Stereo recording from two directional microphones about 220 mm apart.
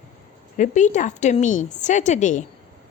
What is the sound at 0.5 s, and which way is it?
A woman's voice, 35° left (ahead or behind).